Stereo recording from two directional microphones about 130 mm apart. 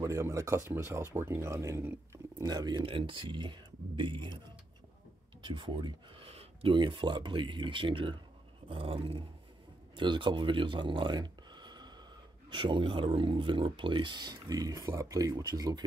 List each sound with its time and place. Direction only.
0.0 s speech: 25° right (ahead or behind)
2.4 s speech: 35° right (ahead or behind)
5.4 s speech: 40° right (ahead or behind)
8.6 s dog: 45° right (ahead or behind)
9.9 s speech: 40° right (ahead or behind)